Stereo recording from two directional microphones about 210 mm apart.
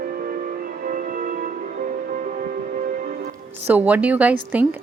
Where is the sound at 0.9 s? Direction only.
40° right (ahead or behind).